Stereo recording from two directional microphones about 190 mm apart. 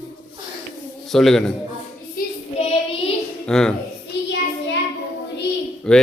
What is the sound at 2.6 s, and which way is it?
Child singing, 35° left (ahead or behind).